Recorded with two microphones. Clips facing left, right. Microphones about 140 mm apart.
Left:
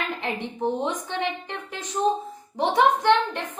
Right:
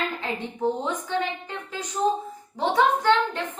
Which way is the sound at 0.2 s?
20° left (ahead or behind).